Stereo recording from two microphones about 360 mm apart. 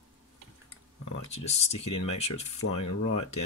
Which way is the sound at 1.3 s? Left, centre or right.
Centre.